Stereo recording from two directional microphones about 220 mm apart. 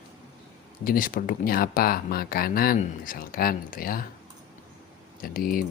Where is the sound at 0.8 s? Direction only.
40° left (ahead or behind).